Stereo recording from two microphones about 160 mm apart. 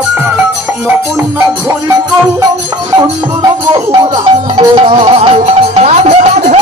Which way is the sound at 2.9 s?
25° right (ahead or behind).